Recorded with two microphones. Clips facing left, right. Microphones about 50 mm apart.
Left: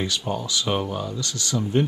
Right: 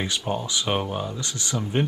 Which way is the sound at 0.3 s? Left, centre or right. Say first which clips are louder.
Even; right.